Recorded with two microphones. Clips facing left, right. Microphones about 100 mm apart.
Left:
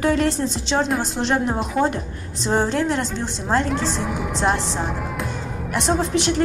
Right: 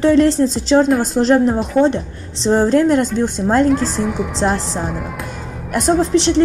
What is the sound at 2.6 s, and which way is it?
A woman's voice, 50° right (ahead or behind).